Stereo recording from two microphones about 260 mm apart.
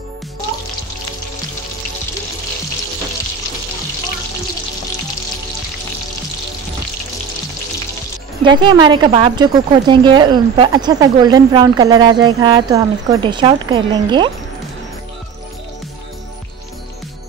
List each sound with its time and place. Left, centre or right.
8.5 s a woman's voice: centre